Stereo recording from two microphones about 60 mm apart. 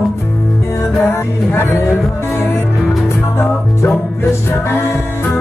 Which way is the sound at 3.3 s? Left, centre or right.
Left.